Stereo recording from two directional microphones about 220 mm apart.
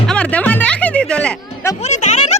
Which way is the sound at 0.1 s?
5° left (ahead or behind).